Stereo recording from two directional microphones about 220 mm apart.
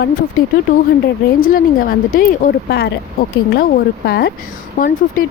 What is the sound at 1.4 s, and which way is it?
A woman's voice, 40° left (ahead or behind).